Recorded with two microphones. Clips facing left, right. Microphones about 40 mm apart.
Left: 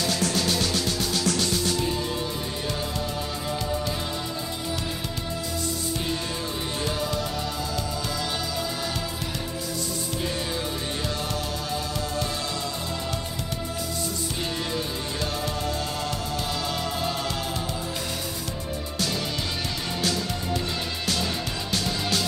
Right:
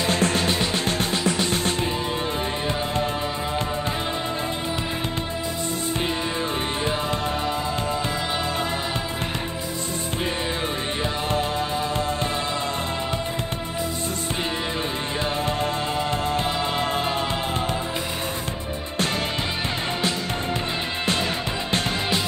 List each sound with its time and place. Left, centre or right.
0.0 s music: right
1.2 s music: right
1.5 s music: right
15.4 s music: right